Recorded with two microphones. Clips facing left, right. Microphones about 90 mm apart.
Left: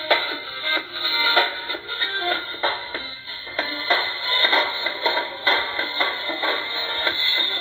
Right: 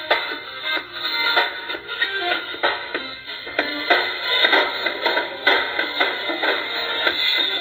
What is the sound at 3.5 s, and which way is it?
Music, 45° right (ahead or behind).